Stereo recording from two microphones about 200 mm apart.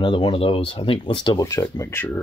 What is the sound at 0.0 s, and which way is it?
Speech, 25° left (ahead or behind).